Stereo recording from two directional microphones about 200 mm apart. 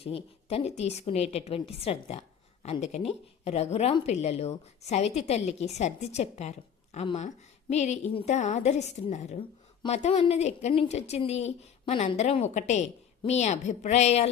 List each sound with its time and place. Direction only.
0.0 s a woman's voice: 30° left (ahead or behind)